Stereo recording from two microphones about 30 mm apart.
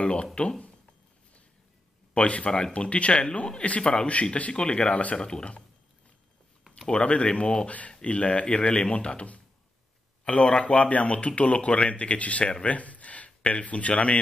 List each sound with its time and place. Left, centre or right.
0.0 s cash register: left
2.1 s speech: left
5.1 s speech: left
7.0 s speech: left
12.6 s a sound: left
13.5 s speech: left